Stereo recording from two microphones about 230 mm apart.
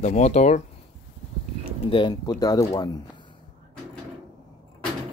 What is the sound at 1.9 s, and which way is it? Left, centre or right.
Speech, centre.